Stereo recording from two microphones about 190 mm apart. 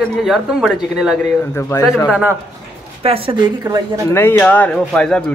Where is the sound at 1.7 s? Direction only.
15° left (ahead or behind).